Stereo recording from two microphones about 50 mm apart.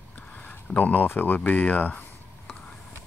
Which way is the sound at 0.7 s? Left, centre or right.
Left.